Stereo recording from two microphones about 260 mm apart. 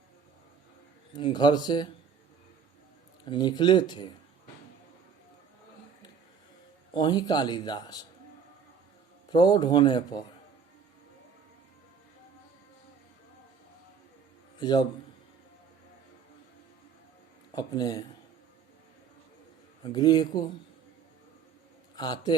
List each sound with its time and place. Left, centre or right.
1.1 s speech: centre
3.2 s speech: centre
6.9 s speech: centre
9.3 s speech: centre
14.6 s a man's voice: centre
17.5 s speech: centre
19.8 s speech: centre
21.9 s a man's voice: centre